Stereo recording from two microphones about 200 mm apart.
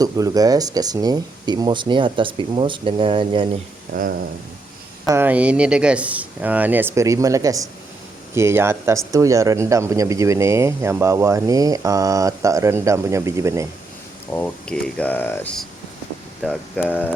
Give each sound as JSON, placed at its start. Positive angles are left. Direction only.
{"t": 0.0, "sound": "speech", "side_deg": -20}
{"t": 3.9, "sound": "speech", "side_deg": -40}
{"t": 5.0, "sound": "speech", "side_deg": -10}
{"t": 14.3, "sound": "speech", "side_deg": 10}